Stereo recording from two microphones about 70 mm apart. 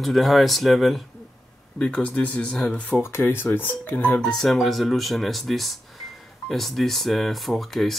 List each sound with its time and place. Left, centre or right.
0.0 s speech: centre
1.8 s speech: centre
3.0 s speech: left
4.2 s speech: centre